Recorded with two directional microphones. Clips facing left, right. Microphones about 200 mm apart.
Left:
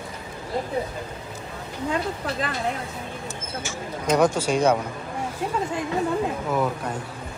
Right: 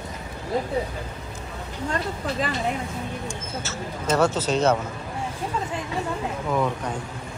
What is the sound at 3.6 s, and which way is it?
Speech, 15° left (ahead or behind).